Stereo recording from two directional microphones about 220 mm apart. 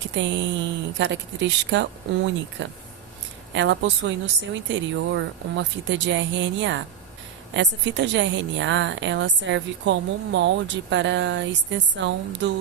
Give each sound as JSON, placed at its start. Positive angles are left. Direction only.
{"t": 0.2, "sound": "a woman's voice", "side_deg": -55}